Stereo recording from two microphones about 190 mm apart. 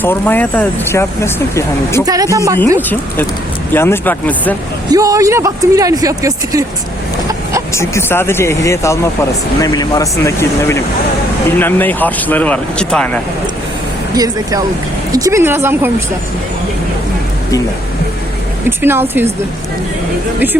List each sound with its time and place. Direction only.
0.0 s speech: 10° left (ahead or behind)
2.0 s speech: 20° right (ahead or behind)
3.7 s speech: 10° left (ahead or behind)
4.9 s speech: 15° right (ahead or behind)
7.7 s speech: 15° left (ahead or behind)
15.1 s speech: 15° right (ahead or behind)
18.8 s speech: 10° right (ahead or behind)